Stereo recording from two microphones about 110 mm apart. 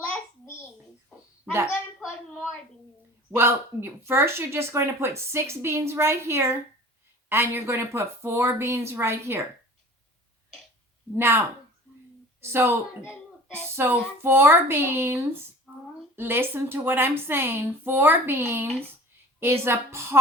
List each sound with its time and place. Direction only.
3.3 s speech: 20° right (ahead or behind)
11.1 s a woman's voice: 20° right (ahead or behind)